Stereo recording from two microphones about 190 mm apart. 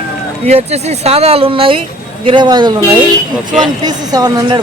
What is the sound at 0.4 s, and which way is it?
Speech, 35° right (ahead or behind).